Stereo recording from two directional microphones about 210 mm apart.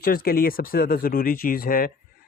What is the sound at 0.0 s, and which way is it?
Speech, 45° left (ahead or behind).